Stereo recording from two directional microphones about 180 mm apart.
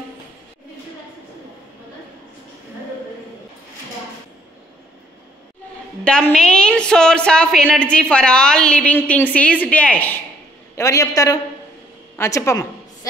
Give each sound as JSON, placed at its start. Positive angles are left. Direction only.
{"t": 6.0, "sound": "a woman's voice", "side_deg": 5}
{"t": 10.8, "sound": "a man's voice", "side_deg": 20}